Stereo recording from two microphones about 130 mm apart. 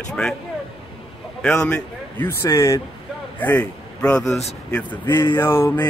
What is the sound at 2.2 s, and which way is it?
Speech, 25° left (ahead or behind).